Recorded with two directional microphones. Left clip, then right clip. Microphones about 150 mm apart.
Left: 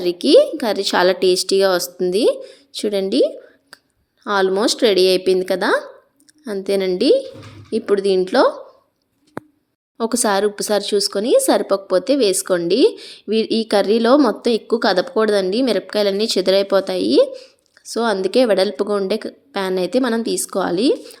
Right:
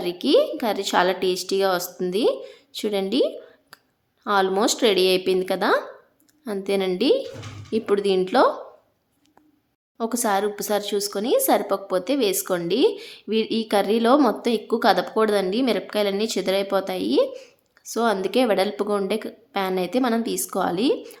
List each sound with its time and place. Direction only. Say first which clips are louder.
0.0 s a woman's voice: left 7 dB; 30° left (ahead or behind)
10.0 s a woman's voice: left 5 dB; 35° left (ahead or behind)